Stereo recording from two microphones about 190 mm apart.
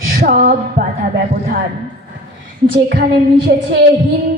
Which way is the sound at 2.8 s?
60° right (ahead or behind).